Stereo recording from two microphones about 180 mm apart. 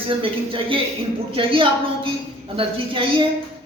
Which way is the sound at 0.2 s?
30° right (ahead or behind).